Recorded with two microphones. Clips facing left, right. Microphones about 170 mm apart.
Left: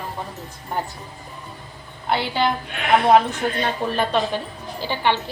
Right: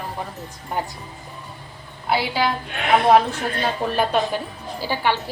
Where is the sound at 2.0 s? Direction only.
5° right (ahead or behind).